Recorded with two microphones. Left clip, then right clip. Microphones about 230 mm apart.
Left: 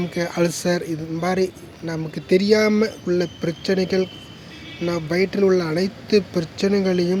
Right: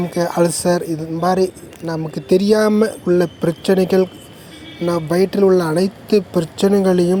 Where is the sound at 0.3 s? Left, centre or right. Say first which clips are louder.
Right 5 dB; centre.